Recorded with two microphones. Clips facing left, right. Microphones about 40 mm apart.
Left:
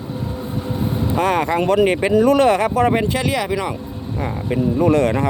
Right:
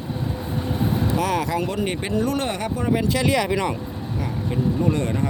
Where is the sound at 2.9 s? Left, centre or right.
Left.